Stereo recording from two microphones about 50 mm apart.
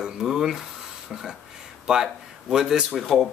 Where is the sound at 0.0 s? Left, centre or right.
Centre.